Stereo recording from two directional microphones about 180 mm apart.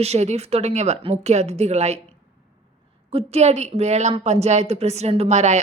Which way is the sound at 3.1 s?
35° right (ahead or behind).